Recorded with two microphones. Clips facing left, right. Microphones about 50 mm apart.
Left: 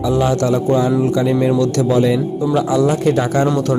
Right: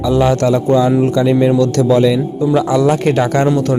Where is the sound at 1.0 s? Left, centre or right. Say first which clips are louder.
Right 3 dB; right.